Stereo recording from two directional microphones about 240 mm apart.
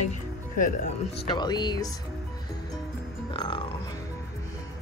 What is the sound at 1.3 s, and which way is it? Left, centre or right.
Speech, centre.